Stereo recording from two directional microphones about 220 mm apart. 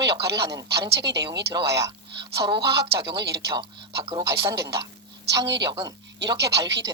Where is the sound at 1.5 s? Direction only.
15° right (ahead or behind).